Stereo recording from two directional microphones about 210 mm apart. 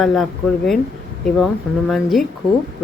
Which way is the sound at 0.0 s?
Centre (ahead or behind).